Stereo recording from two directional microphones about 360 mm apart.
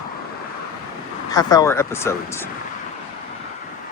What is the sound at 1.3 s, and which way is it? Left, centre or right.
Speech, centre.